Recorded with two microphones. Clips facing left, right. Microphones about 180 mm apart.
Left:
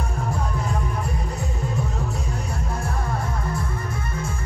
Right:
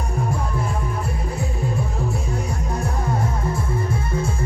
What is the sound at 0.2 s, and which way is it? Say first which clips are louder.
Music: right 3 dB; 10° right (ahead or behind).